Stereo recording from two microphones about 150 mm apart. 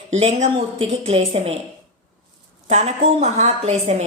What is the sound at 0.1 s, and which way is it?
A woman's voice, 45° right (ahead or behind).